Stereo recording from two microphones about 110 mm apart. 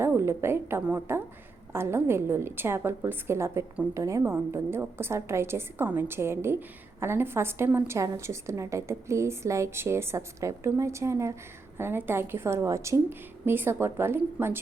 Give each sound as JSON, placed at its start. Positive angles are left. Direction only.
{"t": 0.0, "sound": "a woman's voice", "side_deg": -20}